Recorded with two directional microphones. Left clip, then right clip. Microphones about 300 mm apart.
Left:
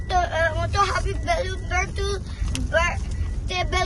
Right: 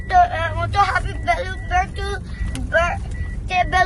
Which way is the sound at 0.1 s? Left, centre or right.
Centre.